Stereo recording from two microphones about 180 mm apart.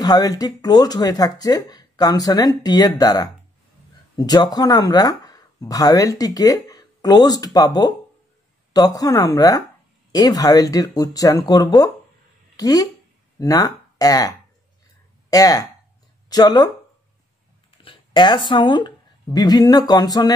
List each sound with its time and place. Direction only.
0.0 s a woman's voice: 20° left (ahead or behind)
17.8 s speech: 25° left (ahead or behind)